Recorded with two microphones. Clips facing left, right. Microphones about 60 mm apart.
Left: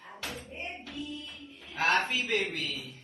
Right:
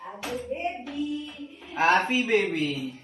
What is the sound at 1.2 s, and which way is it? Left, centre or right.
Music, right.